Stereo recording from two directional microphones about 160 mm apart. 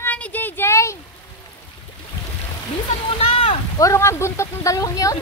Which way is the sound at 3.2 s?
35° left (ahead or behind).